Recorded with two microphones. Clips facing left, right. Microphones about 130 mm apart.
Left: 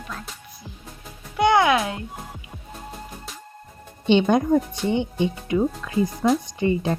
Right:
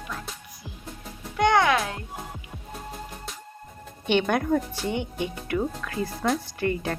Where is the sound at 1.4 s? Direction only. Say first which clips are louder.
Left 3 dB; 5° left (ahead or behind).